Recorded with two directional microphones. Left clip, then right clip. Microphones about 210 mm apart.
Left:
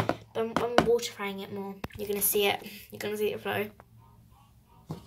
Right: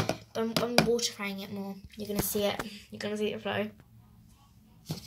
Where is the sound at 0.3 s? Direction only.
Centre (ahead or behind).